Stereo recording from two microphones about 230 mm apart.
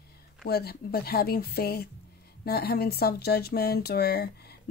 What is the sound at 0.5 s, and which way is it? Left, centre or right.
Speech, left.